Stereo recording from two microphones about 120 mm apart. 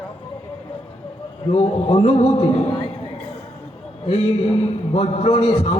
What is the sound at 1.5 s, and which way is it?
A man's voice, 60° left (ahead or behind).